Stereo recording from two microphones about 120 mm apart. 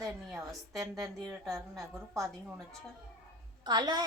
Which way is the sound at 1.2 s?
Centre (ahead or behind).